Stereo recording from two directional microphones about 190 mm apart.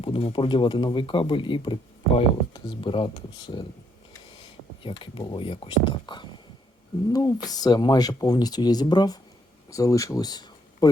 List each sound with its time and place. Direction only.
0.0 s speech: 30° left (ahead or behind)
4.8 s speech: 25° left (ahead or behind)